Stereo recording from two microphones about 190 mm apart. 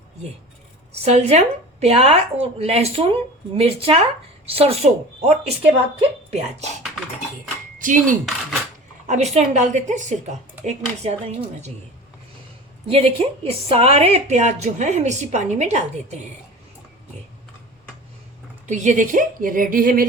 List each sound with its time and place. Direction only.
1.0 s a woman's voice: 35° right (ahead or behind)
7.8 s a woman's voice: 45° right (ahead or behind)
12.9 s a woman's voice: 30° right (ahead or behind)
18.6 s speech: 40° right (ahead or behind)